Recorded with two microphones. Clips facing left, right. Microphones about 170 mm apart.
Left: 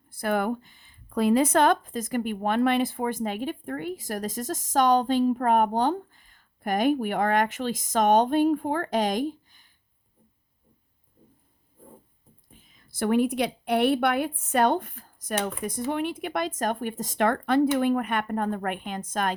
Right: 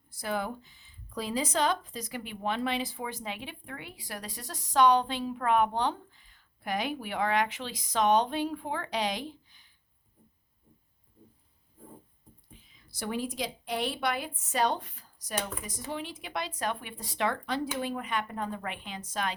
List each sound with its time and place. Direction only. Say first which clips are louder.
0.1 s speech: left 7 dB; 55° left (ahead or behind)
12.5 s speech: left 3 dB; 50° left (ahead or behind)